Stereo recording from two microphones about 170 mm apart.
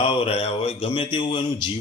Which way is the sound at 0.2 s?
35° left (ahead or behind).